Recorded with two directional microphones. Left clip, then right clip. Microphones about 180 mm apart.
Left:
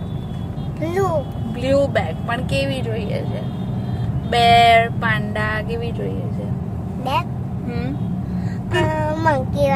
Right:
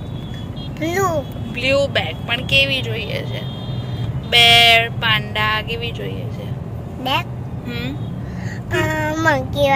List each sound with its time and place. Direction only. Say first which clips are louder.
0.7 s speech: right 2 dB; 10° left (ahead or behind)
1.6 s vehicle: right 1 dB; 35° left (ahead or behind)
4.3 s vehicle: right 2 dB; 30° left (ahead or behind)
8.8 s a child's voice: right 2 dB; 5° left (ahead or behind)